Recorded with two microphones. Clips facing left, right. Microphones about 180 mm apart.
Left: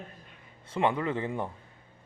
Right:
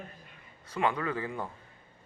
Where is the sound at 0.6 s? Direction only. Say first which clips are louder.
Left 3 dB; 25° left (ahead or behind).